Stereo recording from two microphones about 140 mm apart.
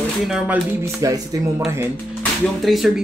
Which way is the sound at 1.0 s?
25° right (ahead or behind).